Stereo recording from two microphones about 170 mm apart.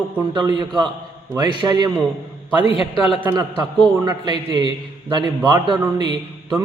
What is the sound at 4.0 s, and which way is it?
A man's voice, 25° right (ahead or behind).